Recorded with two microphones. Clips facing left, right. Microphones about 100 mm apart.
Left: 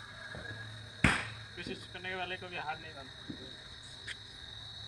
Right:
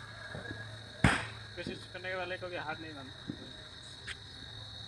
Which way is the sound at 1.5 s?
15° right (ahead or behind).